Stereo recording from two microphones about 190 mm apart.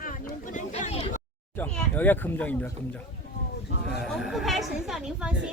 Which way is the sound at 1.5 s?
10° left (ahead or behind).